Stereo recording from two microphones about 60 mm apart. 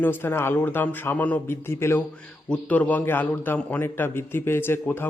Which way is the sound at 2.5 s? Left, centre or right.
Left.